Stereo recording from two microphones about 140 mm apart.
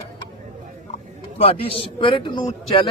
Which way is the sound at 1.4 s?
45° left (ahead or behind).